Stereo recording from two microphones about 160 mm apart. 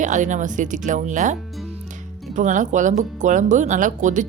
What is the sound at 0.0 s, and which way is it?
Speech, 50° right (ahead or behind).